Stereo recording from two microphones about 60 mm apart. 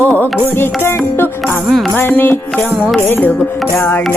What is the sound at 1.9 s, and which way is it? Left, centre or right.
Music, left.